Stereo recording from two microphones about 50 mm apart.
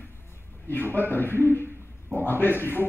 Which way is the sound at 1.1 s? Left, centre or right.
Left.